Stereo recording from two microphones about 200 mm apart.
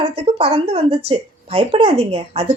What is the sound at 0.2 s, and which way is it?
A woman's voice, 30° right (ahead or behind).